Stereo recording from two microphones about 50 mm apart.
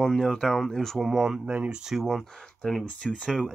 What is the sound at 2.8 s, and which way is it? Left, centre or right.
Speech, left.